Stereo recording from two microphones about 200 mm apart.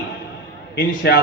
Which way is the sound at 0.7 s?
55° left (ahead or behind).